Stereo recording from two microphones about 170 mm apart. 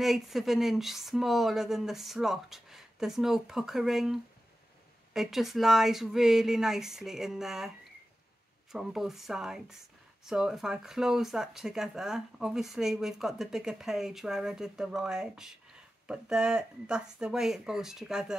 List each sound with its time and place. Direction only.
0.0 s speech: centre (ahead or behind)
8.7 s speech: centre (ahead or behind)